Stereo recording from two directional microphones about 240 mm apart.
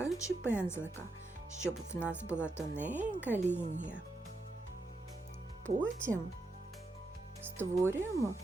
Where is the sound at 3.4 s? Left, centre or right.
Right.